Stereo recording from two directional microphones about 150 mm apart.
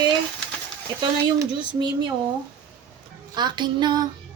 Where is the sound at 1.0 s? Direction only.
30° right (ahead or behind).